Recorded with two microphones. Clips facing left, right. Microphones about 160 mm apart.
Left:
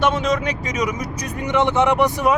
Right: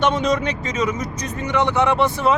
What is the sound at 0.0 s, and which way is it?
Speech, centre (ahead or behind).